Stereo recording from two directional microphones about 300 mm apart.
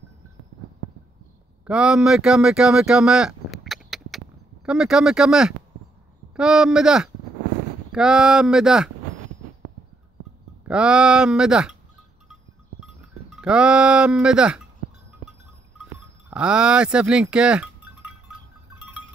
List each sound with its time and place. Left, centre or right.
1.7 s speech: centre
10.7 s speech: centre
12.8 s speech: centre
15.8 s a sound: centre